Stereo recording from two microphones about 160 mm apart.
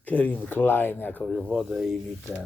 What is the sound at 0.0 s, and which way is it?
A man's voice, 10° left (ahead or behind).